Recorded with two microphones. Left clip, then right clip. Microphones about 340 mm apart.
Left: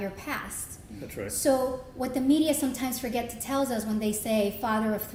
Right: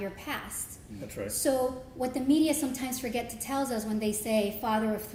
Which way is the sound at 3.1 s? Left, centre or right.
Centre.